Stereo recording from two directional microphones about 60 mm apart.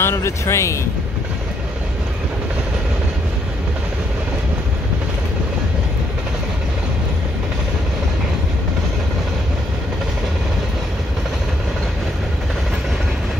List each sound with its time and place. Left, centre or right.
0.0 s speech: left